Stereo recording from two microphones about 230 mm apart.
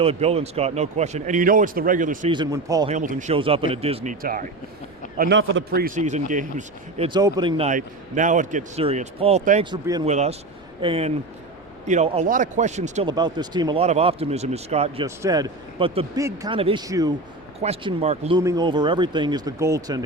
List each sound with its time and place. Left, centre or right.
0.0 s speech: right
2.3 s speech: centre
2.9 s a man's voice: right
7.1 s speech: centre
7.7 s speech: right
9.6 s speech: centre
10.1 s speech: right
15.0 s speech: centre
17.6 s speech: right
18.3 s speech: centre